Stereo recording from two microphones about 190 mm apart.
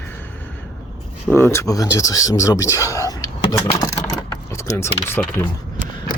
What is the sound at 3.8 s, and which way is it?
Vehicle, 15° left (ahead or behind).